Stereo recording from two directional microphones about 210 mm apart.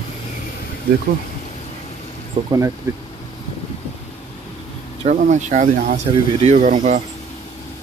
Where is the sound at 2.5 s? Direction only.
15° right (ahead or behind).